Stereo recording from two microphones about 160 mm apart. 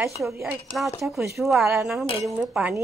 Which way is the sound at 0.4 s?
Centre (ahead or behind).